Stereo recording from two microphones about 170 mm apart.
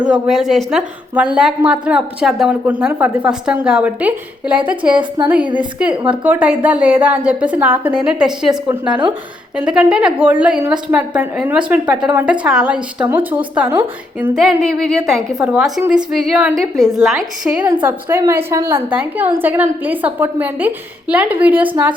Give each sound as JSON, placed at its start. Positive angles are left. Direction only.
{"t": 0.0, "sound": "a woman's voice", "side_deg": -5}
{"t": 4.9, "sound": "a woman's voice", "side_deg": -25}
{"t": 6.1, "sound": "a woman's voice", "side_deg": -10}
{"t": 9.6, "sound": "a woman's voice", "side_deg": -5}
{"t": 14.3, "sound": "a woman's voice", "side_deg": 0}